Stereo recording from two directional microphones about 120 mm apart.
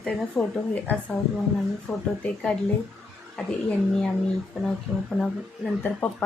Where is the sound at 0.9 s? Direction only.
15° left (ahead or behind).